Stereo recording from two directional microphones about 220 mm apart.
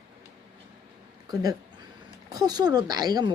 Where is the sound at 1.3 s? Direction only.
15° right (ahead or behind).